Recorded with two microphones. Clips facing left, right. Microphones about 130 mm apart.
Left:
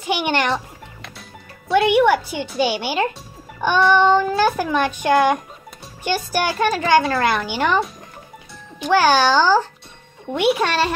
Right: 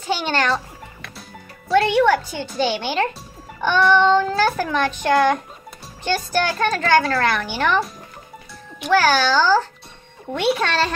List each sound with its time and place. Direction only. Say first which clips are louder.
0.0 s a child's voice: left 1 dB; 15° left (ahead or behind)
1.8 s a child's voice: left 1 dB; 15° left (ahead or behind)
8.9 s a child's voice: left 2 dB; 15° left (ahead or behind)